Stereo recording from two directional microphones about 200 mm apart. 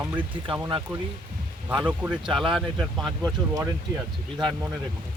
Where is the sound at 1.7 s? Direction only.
5° right (ahead or behind).